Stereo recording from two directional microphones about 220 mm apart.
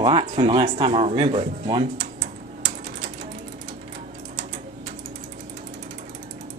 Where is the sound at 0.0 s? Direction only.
25° right (ahead or behind).